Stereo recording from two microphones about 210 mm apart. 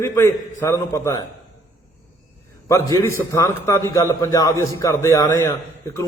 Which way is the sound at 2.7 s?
15° left (ahead or behind).